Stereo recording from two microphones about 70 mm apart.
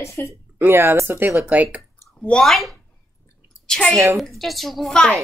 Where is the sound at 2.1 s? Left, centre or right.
Centre.